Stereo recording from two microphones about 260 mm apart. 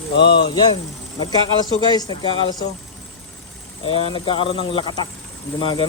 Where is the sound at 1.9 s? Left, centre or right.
Centre.